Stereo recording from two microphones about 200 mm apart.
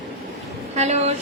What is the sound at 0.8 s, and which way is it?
Speech, 35° right (ahead or behind).